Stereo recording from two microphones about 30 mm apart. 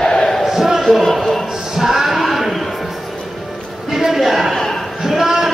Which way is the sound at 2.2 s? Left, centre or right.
Centre.